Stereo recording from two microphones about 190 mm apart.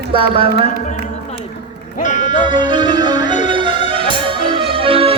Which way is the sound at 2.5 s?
25° right (ahead or behind).